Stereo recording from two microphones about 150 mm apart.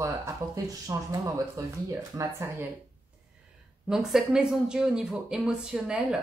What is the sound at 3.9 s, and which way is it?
A woman's voice, centre (ahead or behind).